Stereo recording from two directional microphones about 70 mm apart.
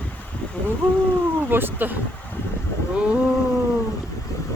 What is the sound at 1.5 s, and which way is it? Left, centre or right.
Speech, right.